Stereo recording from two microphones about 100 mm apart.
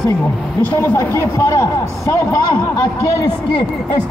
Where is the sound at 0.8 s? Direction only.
20° left (ahead or behind).